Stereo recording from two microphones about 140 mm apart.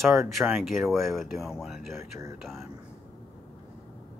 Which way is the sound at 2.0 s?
20° right (ahead or behind).